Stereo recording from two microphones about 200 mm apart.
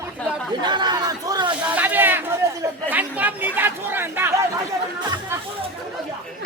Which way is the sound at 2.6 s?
10° right (ahead or behind).